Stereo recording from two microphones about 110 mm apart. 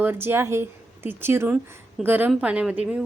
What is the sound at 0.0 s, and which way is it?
A woman's voice, 20° right (ahead or behind).